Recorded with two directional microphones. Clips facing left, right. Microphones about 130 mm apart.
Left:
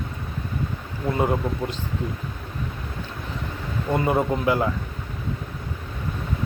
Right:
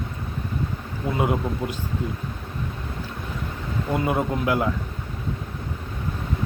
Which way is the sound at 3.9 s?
Centre (ahead or behind).